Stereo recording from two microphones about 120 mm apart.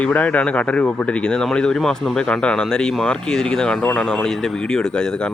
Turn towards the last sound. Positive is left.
turn(degrees=5)  # may be behind; listen again after turning